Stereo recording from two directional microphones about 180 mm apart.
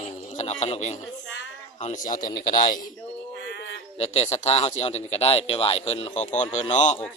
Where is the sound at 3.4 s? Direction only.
75° left (ahead or behind).